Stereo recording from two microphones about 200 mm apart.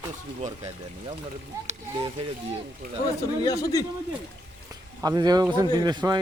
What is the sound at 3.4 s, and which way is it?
Speech, 15° left (ahead or behind).